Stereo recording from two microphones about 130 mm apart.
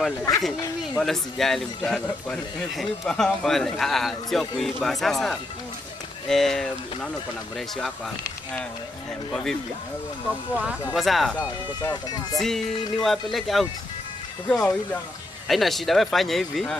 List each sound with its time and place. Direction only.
1.0 s speech: centre (ahead or behind)
9.3 s speech: 5° left (ahead or behind)
10.5 s speech: 10° right (ahead or behind)
11.0 s speech: centre (ahead or behind)
11.8 s speech: 30° left (ahead or behind)
12.4 s speech: centre (ahead or behind)